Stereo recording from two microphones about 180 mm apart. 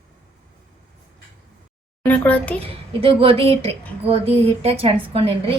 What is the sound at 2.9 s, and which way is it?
A woman's voice, 30° right (ahead or behind).